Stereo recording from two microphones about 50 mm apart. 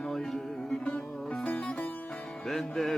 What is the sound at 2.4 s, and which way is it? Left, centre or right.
Music, centre.